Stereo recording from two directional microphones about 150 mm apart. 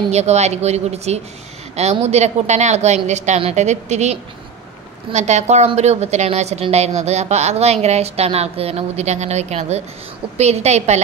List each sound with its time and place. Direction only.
0.1 s a woman's voice: 45° right (ahead or behind)